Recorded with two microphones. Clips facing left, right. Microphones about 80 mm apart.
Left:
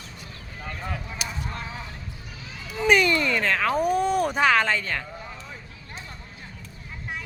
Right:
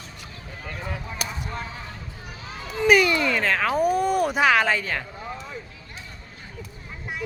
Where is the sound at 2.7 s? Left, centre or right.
Centre.